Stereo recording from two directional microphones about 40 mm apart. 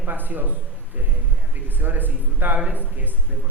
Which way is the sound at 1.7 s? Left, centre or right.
Right.